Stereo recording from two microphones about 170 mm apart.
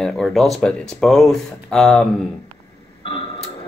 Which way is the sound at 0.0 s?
Centre (ahead or behind).